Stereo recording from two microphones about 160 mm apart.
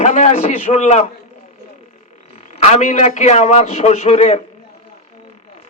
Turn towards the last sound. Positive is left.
turn(degrees=45)  # may be behind; listen again after turning